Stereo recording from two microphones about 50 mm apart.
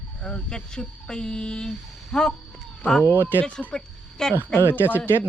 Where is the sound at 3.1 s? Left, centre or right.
Right.